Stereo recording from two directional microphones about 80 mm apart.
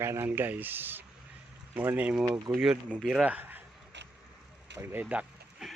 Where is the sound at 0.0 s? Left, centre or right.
Right.